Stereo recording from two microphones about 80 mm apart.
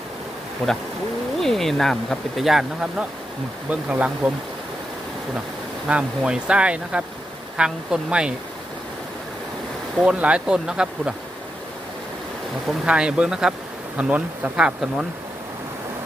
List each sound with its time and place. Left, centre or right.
0.6 s speech: centre
3.7 s speech: centre
5.9 s speech: centre
10.0 s speech: centre
12.8 s speech: centre